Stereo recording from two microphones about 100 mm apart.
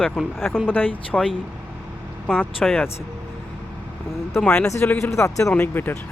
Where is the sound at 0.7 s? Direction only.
15° left (ahead or behind).